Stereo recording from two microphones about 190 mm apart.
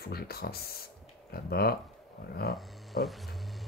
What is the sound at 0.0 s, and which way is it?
Speech, 55° left (ahead or behind).